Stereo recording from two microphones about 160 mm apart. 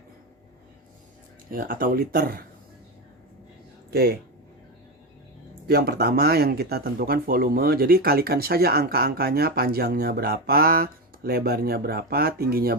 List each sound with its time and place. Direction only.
1.5 s speech: 60° right (ahead or behind)
3.9 s speech: 70° right (ahead or behind)
5.6 s speech: 80° right